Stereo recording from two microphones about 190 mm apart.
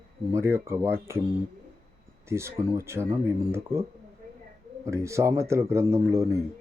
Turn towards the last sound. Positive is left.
turn(degrees=-15)  # may be behind; listen again after turning